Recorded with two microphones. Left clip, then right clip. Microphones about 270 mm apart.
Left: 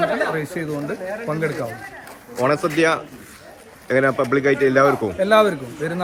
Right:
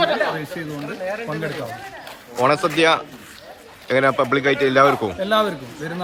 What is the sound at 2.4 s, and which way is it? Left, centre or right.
Speech, centre.